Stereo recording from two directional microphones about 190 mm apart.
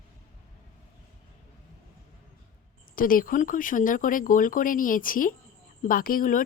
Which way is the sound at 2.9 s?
45° left (ahead or behind).